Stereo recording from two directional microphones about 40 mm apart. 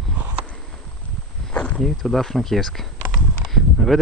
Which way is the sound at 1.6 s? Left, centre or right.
Left.